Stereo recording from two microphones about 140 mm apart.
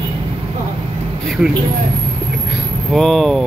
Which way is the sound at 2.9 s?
Centre (ahead or behind).